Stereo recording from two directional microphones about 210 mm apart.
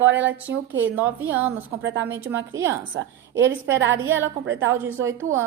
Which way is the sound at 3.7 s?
65° right (ahead or behind).